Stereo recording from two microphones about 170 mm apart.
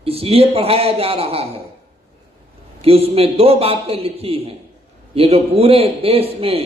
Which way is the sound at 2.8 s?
35° right (ahead or behind).